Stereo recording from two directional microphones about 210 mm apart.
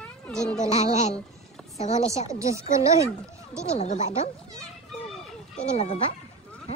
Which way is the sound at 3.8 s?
35° left (ahead or behind).